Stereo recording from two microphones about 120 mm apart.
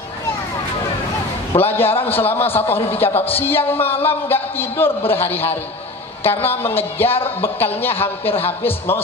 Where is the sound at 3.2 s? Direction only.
15° left (ahead or behind).